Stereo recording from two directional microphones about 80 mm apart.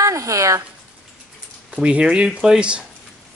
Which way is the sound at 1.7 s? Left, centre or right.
Centre.